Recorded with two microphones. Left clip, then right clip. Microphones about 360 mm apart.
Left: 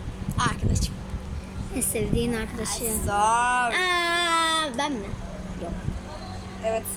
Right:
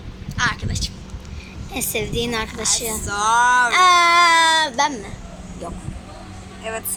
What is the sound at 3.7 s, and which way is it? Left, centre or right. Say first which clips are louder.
Baby cry: right 10 dB; centre.